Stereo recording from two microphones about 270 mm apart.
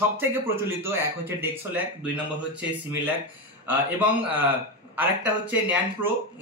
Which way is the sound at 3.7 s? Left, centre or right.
Centre.